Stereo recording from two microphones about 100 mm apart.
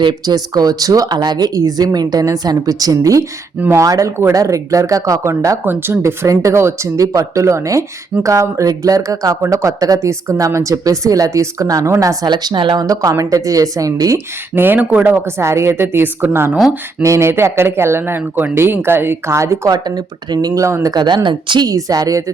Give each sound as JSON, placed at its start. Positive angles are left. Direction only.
{"t": 0.0, "sound": "speech", "side_deg": -45}
{"t": 12.8, "sound": "speech", "side_deg": -35}
{"t": 14.5, "sound": "speech", "side_deg": -20}
{"t": 15.1, "sound": "speech", "side_deg": -25}
{"t": 20.9, "sound": "a woman's voice", "side_deg": -45}
{"t": 21.7, "sound": "speech", "side_deg": -35}